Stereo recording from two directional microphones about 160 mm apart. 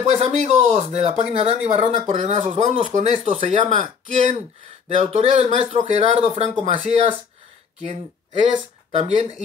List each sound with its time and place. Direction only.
0.0 s speech: 45° right (ahead or behind)
3.7 s speech: 50° right (ahead or behind)
8.9 s speech: 45° right (ahead or behind)